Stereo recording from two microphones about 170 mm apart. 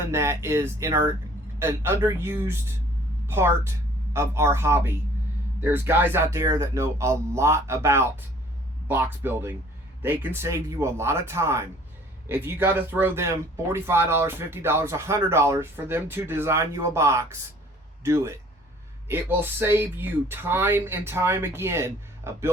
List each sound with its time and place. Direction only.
0.1 s speech: 15° right (ahead or behind)